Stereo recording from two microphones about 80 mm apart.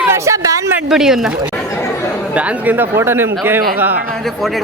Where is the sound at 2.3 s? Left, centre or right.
Centre.